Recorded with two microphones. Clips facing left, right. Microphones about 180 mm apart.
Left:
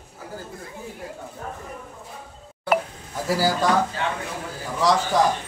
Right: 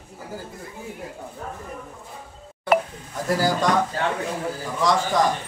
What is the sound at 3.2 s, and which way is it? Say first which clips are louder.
Speech: even; 5° left (ahead or behind).